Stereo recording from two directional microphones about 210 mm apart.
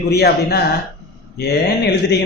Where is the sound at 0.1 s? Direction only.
50° left (ahead or behind).